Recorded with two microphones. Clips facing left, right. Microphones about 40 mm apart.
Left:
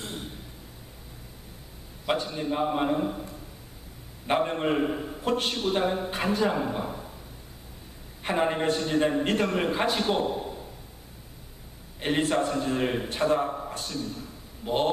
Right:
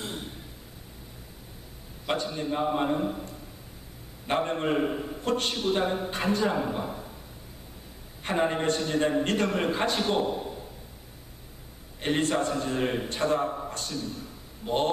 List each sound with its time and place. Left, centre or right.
0.0 s a sound: centre
2.0 s a man's voice: centre
8.2 s a man's voice: centre
12.0 s a man's voice: centre